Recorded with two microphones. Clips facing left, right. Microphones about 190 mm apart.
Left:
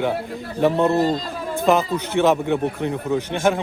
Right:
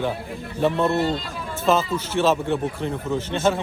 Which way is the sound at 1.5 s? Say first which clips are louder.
Left 2 dB; 15° left (ahead or behind).